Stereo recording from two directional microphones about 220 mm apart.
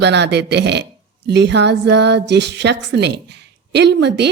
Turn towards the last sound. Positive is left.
turn(degrees=-50)  # may be behind; listen again after turning